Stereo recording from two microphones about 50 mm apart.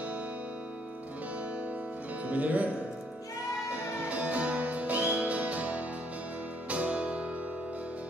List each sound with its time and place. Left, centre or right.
2.2 s speech: right
3.7 s music: right